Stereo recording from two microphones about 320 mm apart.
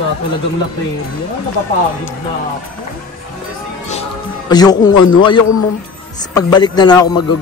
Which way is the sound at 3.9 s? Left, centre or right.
Centre.